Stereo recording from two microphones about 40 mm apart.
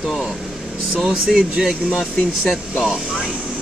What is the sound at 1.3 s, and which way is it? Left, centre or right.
Speech, centre.